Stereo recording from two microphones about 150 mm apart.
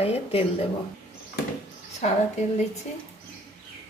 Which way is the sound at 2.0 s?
50° left (ahead or behind).